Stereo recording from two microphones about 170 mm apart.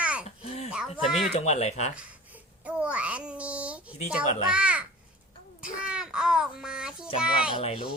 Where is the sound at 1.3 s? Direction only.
40° left (ahead or behind).